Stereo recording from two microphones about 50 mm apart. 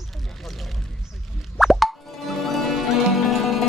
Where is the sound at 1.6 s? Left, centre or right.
Centre.